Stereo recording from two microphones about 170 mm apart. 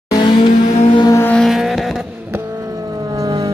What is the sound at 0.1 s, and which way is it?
Vehicle, 25° left (ahead or behind).